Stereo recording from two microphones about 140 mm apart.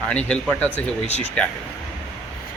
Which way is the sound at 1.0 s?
50° left (ahead or behind).